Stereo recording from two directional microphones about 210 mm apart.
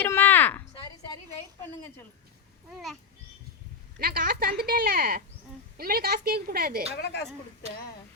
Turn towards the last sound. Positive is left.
turn(degrees=55)  # may be behind; listen again after turning